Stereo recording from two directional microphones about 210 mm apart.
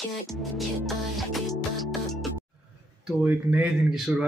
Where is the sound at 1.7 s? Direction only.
Centre (ahead or behind).